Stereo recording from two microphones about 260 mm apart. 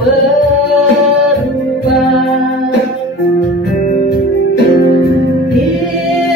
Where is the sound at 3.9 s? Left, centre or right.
Left.